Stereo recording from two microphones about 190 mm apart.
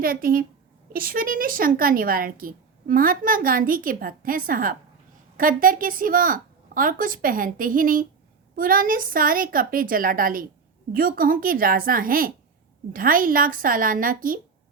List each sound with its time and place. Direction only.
0.0 s a woman's voice: 50° right (ahead or behind)